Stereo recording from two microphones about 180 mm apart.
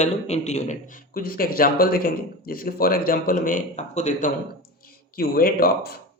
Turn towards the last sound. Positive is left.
turn(degrees=55)  # may be behind; listen again after turning